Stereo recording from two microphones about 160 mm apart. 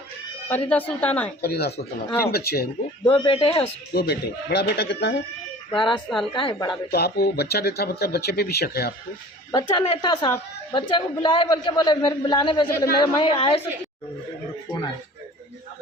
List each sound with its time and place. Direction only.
0.4 s a woman's voice: 10° left (ahead or behind)
1.4 s speech: 85° left
2.0 s a woman's voice: 15° left (ahead or behind)
2.3 s speech: 80° left
3.1 s a man's voice: 35° left (ahead or behind)
3.9 s a man's voice: 85° left
5.7 s a man's voice: 30° left (ahead or behind)
6.9 s speech: 85° left
9.5 s a man's voice: 30° left (ahead or behind)